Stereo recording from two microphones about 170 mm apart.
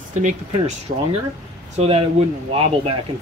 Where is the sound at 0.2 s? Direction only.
40° right (ahead or behind).